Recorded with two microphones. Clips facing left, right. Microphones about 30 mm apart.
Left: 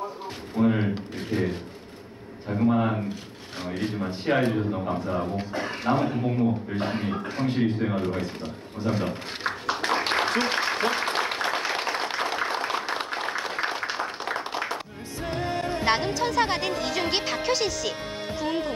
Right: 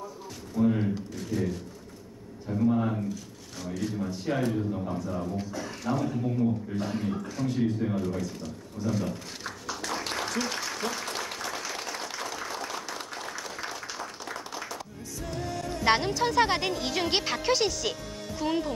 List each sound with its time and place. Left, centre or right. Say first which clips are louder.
0.6 s a man's voice: left 2 dB; left
8.7 s a sound: left 3 dB; left
15.2 s music: left 6 dB; left
16.2 s speech: even; centre
18.4 s speech: even; left